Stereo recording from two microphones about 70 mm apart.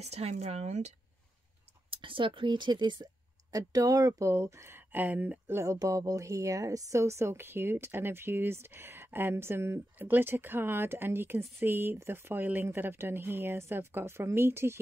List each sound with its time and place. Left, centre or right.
2.4 s speech: right
3.5 s speech: right
5.5 s speech: right
5.8 s a woman's voice: right